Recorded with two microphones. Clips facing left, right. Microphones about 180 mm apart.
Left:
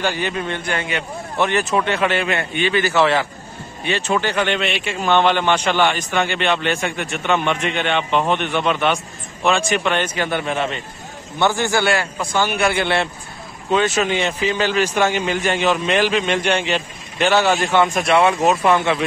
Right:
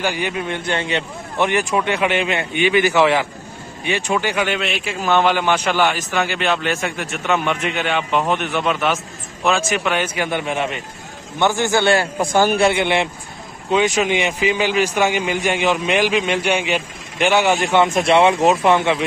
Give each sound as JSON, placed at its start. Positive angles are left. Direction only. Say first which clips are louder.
{"t": 0.0, "sound": "a man's voice", "louder": "even", "side_deg": -15}
{"t": 0.7, "sound": "a man's voice", "louder": "right 2 dB", "side_deg": -25}
{"t": 1.5, "sound": "a man's voice", "louder": "even", "side_deg": -15}
{"t": 12.2, "sound": "a man's voice", "louder": "right 5 dB", "side_deg": -45}
{"t": 12.5, "sound": "a man's voice", "louder": "right 2 dB", "side_deg": -20}